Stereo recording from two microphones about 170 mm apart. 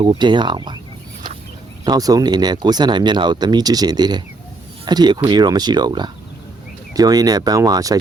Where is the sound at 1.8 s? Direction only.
20° right (ahead or behind).